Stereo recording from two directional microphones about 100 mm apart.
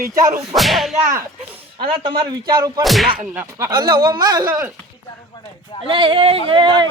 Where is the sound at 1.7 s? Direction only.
55° right (ahead or behind).